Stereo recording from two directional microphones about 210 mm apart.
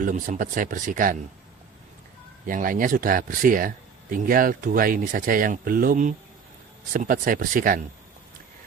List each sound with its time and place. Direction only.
0.0 s speech: 40° right (ahead or behind)
2.5 s speech: 40° right (ahead or behind)